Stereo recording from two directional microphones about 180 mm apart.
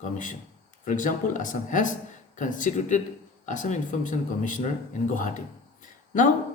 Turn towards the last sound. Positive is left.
turn(degrees=45)  # may be behind; listen again after turning